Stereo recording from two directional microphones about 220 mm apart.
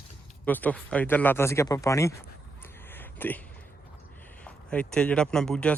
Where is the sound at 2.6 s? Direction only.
10° left (ahead or behind).